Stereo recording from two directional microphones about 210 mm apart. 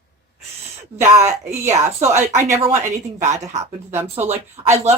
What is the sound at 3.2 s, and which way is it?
Speech, 35° right (ahead or behind).